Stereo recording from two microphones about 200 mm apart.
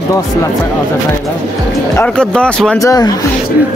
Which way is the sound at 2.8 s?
20° left (ahead or behind).